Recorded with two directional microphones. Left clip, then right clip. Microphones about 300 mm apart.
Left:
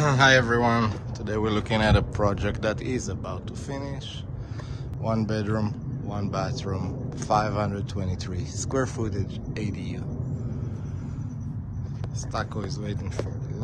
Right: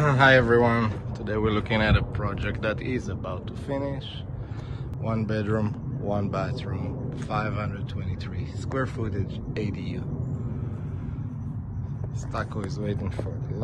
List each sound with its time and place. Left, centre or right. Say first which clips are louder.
0.0 s speech: right 1 dB; centre
5.0 s speech: left 1 dB; centre
12.4 s speech: even; centre